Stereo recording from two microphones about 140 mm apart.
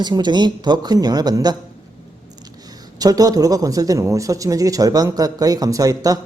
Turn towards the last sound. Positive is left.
turn(degrees=-25)  # may be behind; listen again after turning